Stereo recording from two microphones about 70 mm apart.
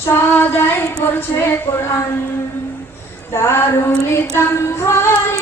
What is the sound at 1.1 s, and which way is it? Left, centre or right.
Speech, left.